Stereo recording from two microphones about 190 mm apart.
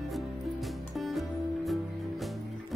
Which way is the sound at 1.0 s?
Centre (ahead or behind).